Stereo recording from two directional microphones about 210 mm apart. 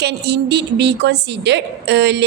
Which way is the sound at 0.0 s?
50° right (ahead or behind).